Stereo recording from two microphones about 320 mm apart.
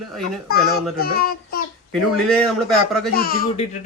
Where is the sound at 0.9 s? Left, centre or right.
Left.